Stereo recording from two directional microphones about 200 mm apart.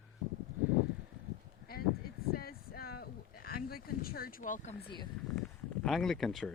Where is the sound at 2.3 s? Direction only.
50° left (ahead or behind).